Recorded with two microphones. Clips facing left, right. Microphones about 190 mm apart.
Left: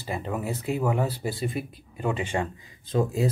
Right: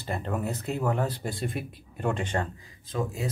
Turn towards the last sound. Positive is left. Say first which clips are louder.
# left 6 dB
turn(degrees=30)  # may be behind; listen again after turning